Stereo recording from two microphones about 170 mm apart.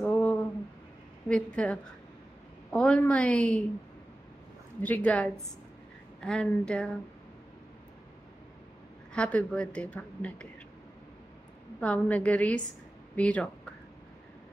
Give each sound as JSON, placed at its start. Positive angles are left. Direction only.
{"t": 0.0, "sound": "a sound", "side_deg": 10}
{"t": 1.3, "sound": "a woman's voice", "side_deg": 5}
{"t": 4.8, "sound": "a woman's voice", "side_deg": 10}
{"t": 9.1, "sound": "a woman's voice", "side_deg": 5}
{"t": 11.8, "sound": "a woman's voice", "side_deg": 5}